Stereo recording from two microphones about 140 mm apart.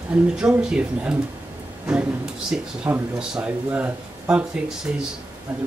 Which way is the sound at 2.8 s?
10° right (ahead or behind).